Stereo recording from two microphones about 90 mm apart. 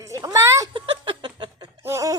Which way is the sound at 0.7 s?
70° right (ahead or behind).